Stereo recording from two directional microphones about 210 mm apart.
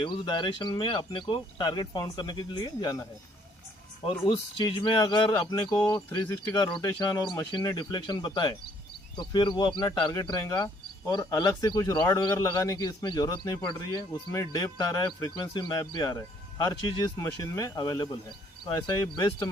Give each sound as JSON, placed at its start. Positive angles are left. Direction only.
{"t": 0.0, "sound": "speech", "side_deg": 20}
{"t": 4.3, "sound": "speech", "side_deg": 20}